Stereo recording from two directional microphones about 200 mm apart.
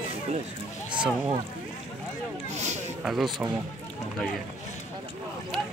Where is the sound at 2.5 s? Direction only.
35° right (ahead or behind).